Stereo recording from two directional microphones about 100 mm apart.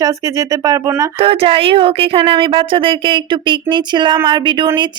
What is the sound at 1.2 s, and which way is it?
A woman's voice, 70° right (ahead or behind).